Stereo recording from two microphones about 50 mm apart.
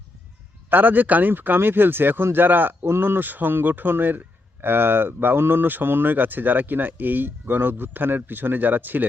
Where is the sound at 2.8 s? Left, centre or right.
Right.